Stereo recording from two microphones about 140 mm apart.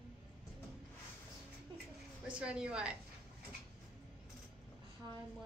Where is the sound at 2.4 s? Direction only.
5° right (ahead or behind).